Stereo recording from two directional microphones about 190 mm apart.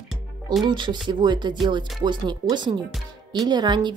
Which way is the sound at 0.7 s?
25° right (ahead or behind).